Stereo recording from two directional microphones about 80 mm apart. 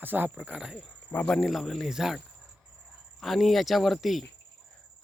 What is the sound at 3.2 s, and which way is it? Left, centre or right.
Speech, centre.